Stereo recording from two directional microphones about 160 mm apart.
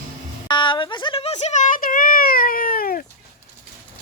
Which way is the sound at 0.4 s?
30° left (ahead or behind).